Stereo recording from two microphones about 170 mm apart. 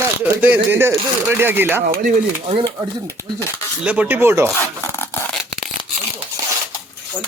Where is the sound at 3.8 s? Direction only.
5° right (ahead or behind).